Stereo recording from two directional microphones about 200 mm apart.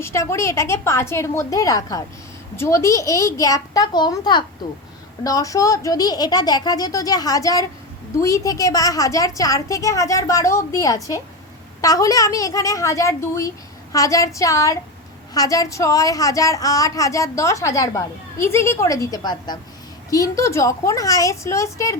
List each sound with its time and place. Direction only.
0.0 s a woman's voice: 15° left (ahead or behind)